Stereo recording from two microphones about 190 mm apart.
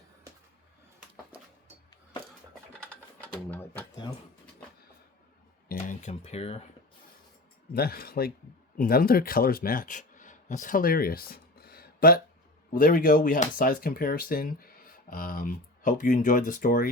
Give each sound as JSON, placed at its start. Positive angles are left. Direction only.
{"t": 3.2, "sound": "speech", "side_deg": 10}
{"t": 5.6, "sound": "speech", "side_deg": 40}
{"t": 7.7, "sound": "speech", "side_deg": 50}